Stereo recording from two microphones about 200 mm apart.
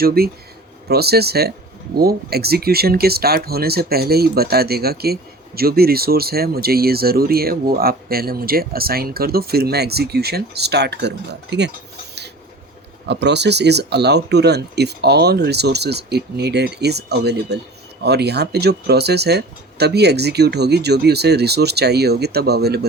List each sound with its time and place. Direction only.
0.0 s speech: 50° right (ahead or behind)
13.1 s speech: 60° right (ahead or behind)